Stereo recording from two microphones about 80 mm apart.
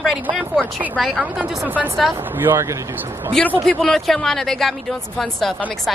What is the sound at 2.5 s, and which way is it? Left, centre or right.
Speech, right.